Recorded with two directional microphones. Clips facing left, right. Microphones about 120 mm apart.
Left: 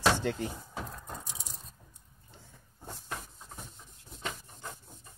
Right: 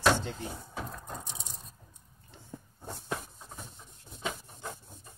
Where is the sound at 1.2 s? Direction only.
25° right (ahead or behind).